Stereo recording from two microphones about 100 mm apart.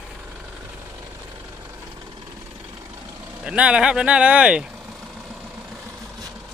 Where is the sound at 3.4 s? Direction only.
10° right (ahead or behind).